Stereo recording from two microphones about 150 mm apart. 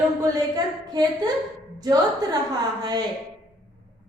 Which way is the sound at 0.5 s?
25° right (ahead or behind).